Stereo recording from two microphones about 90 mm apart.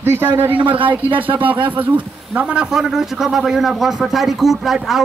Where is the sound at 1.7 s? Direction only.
20° right (ahead or behind).